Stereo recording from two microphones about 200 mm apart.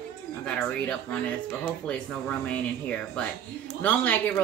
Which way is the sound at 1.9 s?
5° left (ahead or behind).